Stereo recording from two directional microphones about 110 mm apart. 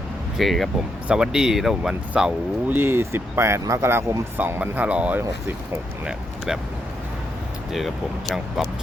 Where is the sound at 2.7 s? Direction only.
20° right (ahead or behind).